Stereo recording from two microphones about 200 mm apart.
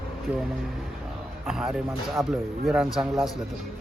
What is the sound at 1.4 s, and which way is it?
Speech, 5° right (ahead or behind).